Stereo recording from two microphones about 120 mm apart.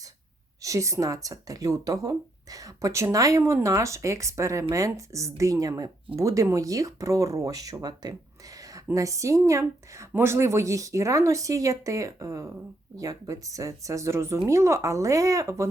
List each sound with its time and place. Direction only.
0.6 s speech: 25° right (ahead or behind)